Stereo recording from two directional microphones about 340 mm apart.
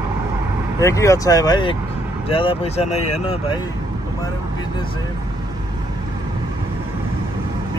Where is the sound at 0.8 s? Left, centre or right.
Centre.